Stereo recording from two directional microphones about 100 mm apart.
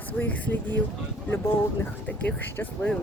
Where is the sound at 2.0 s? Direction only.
15° left (ahead or behind).